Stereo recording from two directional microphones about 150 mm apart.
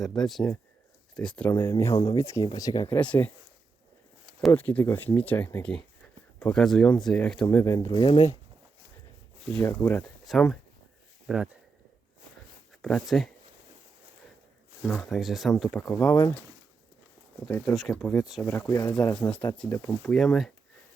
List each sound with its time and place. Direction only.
0.0 s speech: centre (ahead or behind); by 2.9 s 25° left (ahead or behind)
2.9 s speech: 10° left (ahead or behind)
4.5 s speech: 10° left (ahead or behind)
7.5 s speech: 20° left (ahead or behind)
8.0 s speech: 35° left (ahead or behind)
9.5 s speech: 5° left (ahead or behind)
10.2 s speech: 5° left (ahead or behind)
12.8 s speech: centre (ahead or behind)
14.8 s speech: 5° left (ahead or behind)
17.7 s speech: centre (ahead or behind)
18.4 s speech: 15° left (ahead or behind)
20.1 s speech: 5° left (ahead or behind)